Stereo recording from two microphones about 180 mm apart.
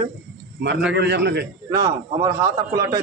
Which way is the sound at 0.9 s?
65° right (ahead or behind).